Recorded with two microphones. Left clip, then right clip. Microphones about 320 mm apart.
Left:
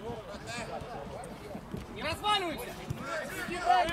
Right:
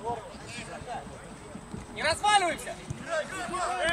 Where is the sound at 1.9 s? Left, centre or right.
Right.